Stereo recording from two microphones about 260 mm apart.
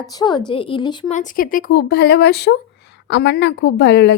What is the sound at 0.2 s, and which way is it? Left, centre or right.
A woman's voice, centre.